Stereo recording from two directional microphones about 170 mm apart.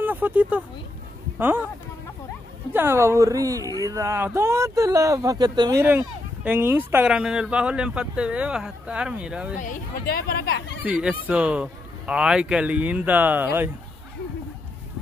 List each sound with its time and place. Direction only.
0.0 s speech: 10° right (ahead or behind)
2.7 s speech: 15° right (ahead or behind)
5.9 s speech: 10° right (ahead or behind)
9.6 s speech: 55° left (ahead or behind)
10.8 s speech: 5° right (ahead or behind)